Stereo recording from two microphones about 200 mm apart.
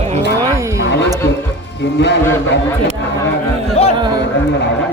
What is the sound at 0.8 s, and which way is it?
Music, 60° left (ahead or behind).